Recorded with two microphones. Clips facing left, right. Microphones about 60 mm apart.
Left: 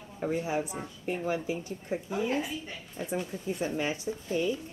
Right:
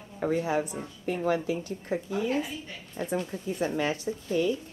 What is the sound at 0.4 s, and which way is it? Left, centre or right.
Speech, right.